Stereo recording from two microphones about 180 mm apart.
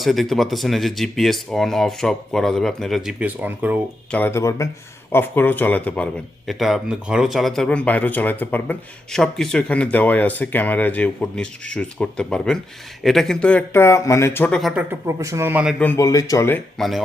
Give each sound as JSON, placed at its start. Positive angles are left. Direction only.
{"t": 0.0, "sound": "speech", "side_deg": 0}
{"t": 4.1, "sound": "speech", "side_deg": 10}
{"t": 14.6, "sound": "speech", "side_deg": -10}
{"t": 15.8, "sound": "speech", "side_deg": 15}
{"t": 16.7, "sound": "speech", "side_deg": 0}